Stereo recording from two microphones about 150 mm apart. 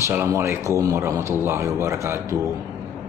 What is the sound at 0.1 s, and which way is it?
Speech, 15° right (ahead or behind).